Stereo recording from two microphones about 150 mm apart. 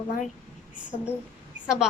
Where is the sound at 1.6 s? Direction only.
5° right (ahead or behind).